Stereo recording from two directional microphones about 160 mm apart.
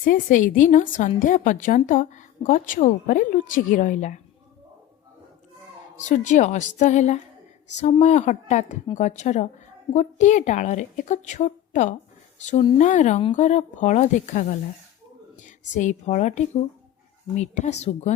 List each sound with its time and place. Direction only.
0.0 s a woman's voice: 55° left (ahead or behind)
6.0 s a woman's voice: 50° left (ahead or behind)